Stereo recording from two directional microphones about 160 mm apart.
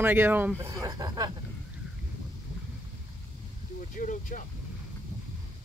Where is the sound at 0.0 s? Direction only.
15° right (ahead or behind).